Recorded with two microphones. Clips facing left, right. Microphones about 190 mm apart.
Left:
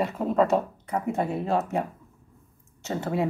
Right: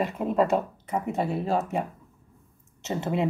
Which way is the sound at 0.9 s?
Centre (ahead or behind).